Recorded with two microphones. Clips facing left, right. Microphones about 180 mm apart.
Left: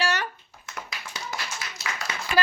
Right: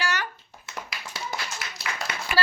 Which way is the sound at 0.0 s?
30° left (ahead or behind).